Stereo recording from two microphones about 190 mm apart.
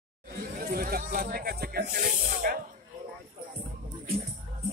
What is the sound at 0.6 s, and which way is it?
Snake, 50° right (ahead or behind).